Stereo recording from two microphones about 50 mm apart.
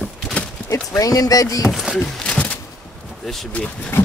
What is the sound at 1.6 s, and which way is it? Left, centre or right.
Speech, centre.